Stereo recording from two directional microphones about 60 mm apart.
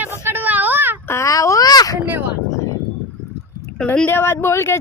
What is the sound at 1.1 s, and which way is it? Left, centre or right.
Speech, left.